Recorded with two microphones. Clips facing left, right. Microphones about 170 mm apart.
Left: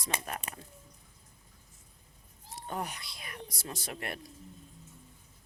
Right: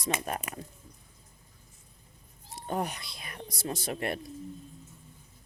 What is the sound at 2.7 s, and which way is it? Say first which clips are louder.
Speech: right 5 dB; 25° right (ahead or behind).